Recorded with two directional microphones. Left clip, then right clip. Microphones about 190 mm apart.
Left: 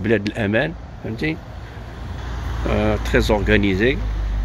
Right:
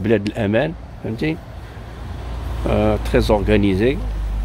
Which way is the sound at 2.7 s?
10° right (ahead or behind).